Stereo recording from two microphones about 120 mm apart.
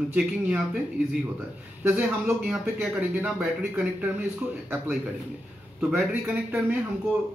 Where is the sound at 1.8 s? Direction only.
10° right (ahead or behind).